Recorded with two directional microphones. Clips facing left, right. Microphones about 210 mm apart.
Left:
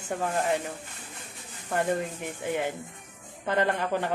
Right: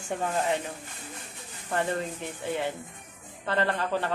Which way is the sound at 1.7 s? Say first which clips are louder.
Left 2 dB; 10° left (ahead or behind).